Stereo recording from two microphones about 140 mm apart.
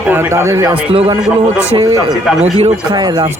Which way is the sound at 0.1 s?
20° right (ahead or behind).